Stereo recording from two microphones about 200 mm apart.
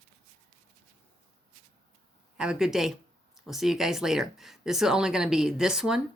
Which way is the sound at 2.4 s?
5° right (ahead or behind).